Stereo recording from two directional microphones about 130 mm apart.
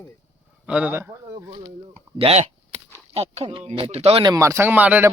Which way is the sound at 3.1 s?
50° right (ahead or behind).